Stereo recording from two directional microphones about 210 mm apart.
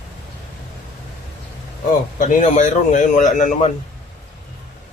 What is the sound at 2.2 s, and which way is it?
Speech, 35° left (ahead or behind).